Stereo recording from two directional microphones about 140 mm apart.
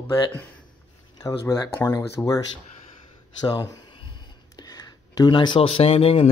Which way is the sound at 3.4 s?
30° left (ahead or behind).